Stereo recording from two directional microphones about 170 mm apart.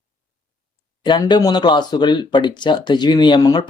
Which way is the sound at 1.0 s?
25° left (ahead or behind).